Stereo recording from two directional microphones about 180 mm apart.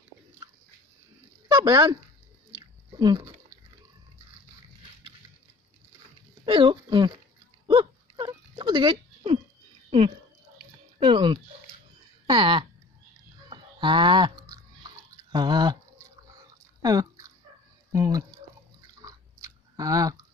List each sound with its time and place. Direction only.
1.5 s speech: 20° right (ahead or behind)
3.0 s a sound: 20° right (ahead or behind)
6.4 s speech: 25° right (ahead or behind)
7.6 s a sound: 25° right (ahead or behind)
13.5 s livestock: 25° right (ahead or behind)
15.3 s a sound: 25° right (ahead or behind)
16.8 s chewing: 20° right (ahead or behind)
17.9 s drip: 20° right (ahead or behind)
19.0 s chewing: 20° right (ahead or behind)